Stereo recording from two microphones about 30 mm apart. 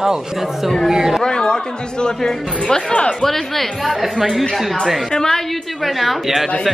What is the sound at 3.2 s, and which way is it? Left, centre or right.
A woman's voice, centre.